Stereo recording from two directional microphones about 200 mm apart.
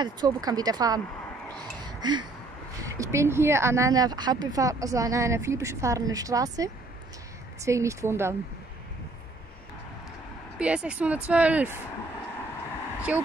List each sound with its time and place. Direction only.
0.0 s speech: 20° right (ahead or behind)
1.9 s a sound: 20° right (ahead or behind)
2.8 s speech: 15° right (ahead or behind)
10.6 s speech: 5° right (ahead or behind)
13.1 s speech: 5° right (ahead or behind)